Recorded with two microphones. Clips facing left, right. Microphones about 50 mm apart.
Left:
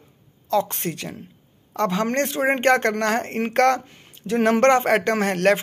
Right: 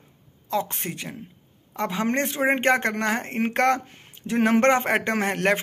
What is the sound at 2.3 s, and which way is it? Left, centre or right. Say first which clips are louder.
Speech: left 3 dB; right.